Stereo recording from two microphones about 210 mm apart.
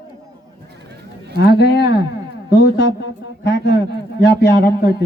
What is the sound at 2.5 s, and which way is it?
Speech, 50° left (ahead or behind).